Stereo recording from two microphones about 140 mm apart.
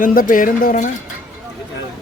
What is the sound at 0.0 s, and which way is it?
Speech, 80° left.